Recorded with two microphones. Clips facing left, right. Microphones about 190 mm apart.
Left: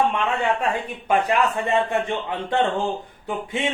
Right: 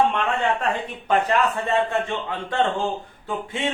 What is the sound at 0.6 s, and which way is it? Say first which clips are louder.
A man's voice: left 1 dB; 10° left (ahead or behind).